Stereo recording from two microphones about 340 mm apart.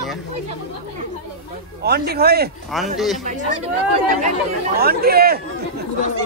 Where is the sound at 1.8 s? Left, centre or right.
Right.